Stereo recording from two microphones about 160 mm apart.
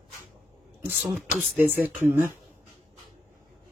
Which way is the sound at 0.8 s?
10° right (ahead or behind).